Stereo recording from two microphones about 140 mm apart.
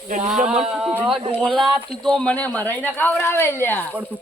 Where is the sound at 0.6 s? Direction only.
10° right (ahead or behind); by 3.9 s 15° left (ahead or behind).